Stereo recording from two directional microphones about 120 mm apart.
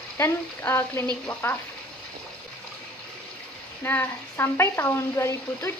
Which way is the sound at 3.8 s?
15° left (ahead or behind).